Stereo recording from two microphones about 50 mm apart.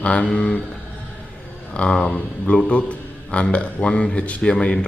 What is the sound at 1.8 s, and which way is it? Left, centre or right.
A man's voice, centre.